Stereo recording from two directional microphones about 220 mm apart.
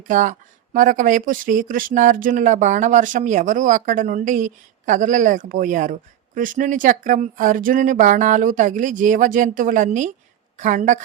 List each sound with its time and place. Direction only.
0.0 s speech: 35° right (ahead or behind)